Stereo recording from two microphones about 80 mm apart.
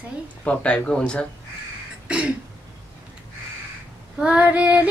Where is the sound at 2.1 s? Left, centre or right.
Centre.